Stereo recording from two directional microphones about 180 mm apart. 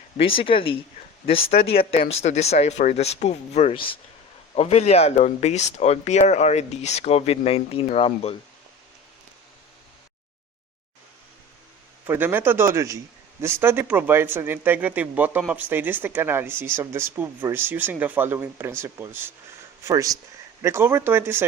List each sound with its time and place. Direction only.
0.3 s speech: 30° left (ahead or behind)
12.0 s speech: 10° right (ahead or behind)